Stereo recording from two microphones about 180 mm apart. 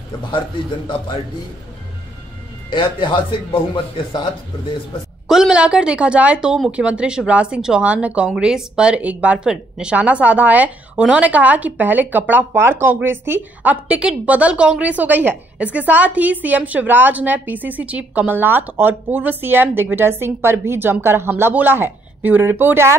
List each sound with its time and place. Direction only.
2.7 s speech: 25° left (ahead or behind)
5.3 s a woman's voice: 5° right (ahead or behind)